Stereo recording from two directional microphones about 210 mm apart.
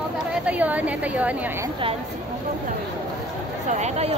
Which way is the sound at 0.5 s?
5° right (ahead or behind).